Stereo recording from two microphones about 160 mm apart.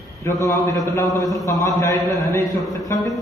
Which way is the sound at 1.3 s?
20° left (ahead or behind).